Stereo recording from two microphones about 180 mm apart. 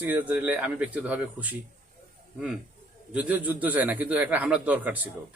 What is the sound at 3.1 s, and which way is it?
A man's voice, 10° right (ahead or behind).